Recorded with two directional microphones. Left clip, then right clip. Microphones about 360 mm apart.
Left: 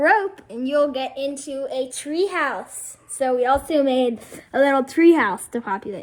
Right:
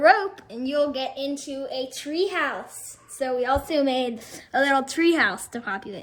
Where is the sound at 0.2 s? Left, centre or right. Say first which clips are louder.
Left 3 dB; centre.